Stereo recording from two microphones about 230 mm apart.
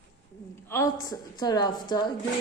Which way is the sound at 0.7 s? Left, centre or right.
Centre.